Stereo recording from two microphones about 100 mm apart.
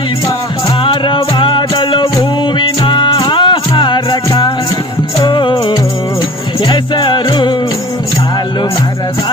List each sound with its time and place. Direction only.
0.8 s music: 55° left (ahead or behind)
5.2 s music: 55° left (ahead or behind)